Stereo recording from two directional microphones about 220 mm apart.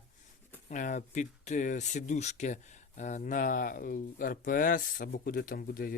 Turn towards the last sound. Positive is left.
turn(degrees=40)  # may be behind; listen again after turning